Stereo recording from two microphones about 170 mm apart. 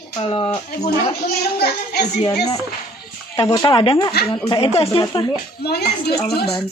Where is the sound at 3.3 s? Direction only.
20° left (ahead or behind).